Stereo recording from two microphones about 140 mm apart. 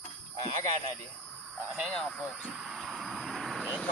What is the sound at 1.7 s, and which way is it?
Speech, 5° left (ahead or behind).